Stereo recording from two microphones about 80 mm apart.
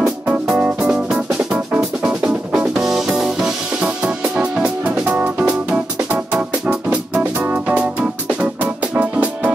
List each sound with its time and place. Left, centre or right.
0.5 s music: centre
0.8 s music: centre